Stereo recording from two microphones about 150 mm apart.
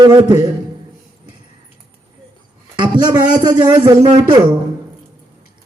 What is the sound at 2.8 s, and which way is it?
Speech, 30° right (ahead or behind).